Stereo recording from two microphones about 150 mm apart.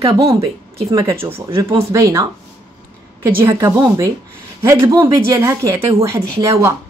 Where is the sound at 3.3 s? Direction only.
15° right (ahead or behind).